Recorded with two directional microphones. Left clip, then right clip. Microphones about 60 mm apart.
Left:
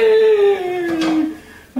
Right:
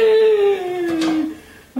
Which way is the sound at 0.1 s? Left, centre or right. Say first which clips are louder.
Left 2 dB; centre.